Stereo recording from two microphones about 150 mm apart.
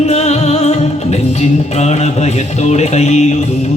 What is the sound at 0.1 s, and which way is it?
Music, 45° left (ahead or behind).